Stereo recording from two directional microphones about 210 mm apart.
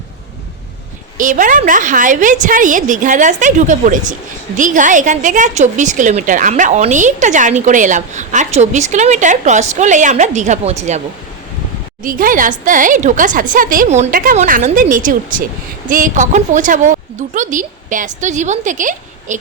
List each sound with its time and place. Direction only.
1.2 s a woman's voice: 40° right (ahead or behind)
12.0 s a woman's voice: 40° right (ahead or behind)